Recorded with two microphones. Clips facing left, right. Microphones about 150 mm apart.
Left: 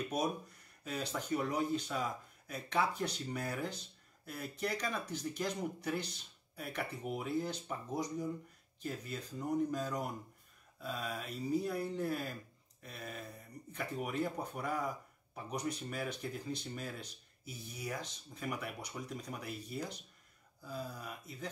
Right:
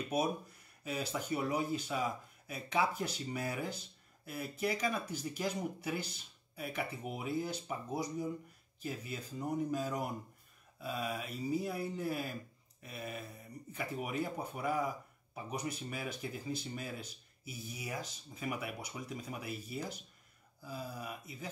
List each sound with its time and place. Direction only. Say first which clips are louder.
0.8 s speech: right 1 dB; 5° right (ahead or behind)